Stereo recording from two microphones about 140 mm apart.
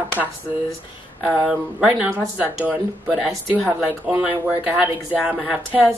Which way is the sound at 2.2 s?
15° right (ahead or behind).